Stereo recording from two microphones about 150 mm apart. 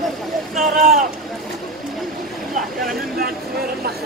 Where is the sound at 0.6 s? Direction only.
65° right (ahead or behind).